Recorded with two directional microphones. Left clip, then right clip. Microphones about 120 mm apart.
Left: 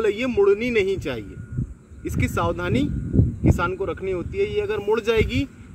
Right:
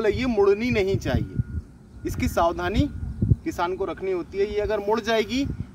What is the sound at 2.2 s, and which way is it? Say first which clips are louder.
Speech: right 2 dB; 25° right (ahead or behind).